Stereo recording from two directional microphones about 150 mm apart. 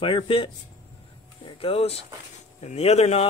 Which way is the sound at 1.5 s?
40° left (ahead or behind).